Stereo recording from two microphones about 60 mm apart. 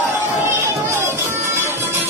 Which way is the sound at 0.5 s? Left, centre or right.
Right.